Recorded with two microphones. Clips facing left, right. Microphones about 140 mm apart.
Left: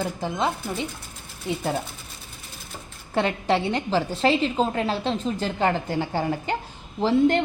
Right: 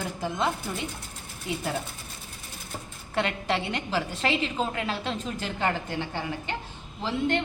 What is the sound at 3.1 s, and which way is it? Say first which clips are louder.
A woman's voice: left 5 dB; 30° left (ahead or behind).